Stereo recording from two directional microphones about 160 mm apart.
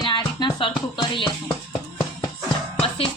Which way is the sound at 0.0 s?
30° left (ahead or behind).